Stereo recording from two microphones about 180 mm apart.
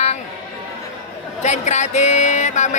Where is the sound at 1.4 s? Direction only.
40° left (ahead or behind).